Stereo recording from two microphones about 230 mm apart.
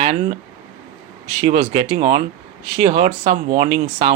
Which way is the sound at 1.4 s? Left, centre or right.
Right.